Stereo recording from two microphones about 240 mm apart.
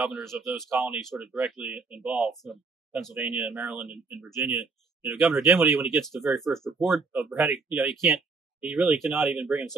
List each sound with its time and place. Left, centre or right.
0.0 s speech: centre
0.7 s speech: centre
5.9 s speech: centre